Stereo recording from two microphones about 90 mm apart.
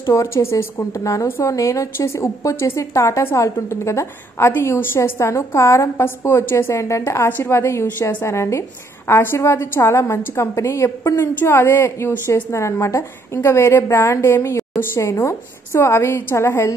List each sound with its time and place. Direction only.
0.1 s a woman's voice: 30° left (ahead or behind)
7.2 s a woman's voice: 20° left (ahead or behind)
12.1 s a woman's voice: 15° left (ahead or behind)
12.4 s a woman's voice: 30° left (ahead or behind)